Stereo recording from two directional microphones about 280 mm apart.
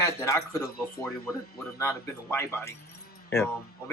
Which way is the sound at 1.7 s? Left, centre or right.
Centre.